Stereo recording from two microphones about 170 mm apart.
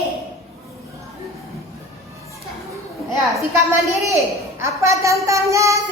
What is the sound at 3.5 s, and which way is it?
A child's voice, 20° right (ahead or behind).